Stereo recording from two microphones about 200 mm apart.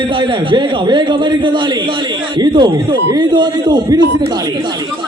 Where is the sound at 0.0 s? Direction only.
25° right (ahead or behind).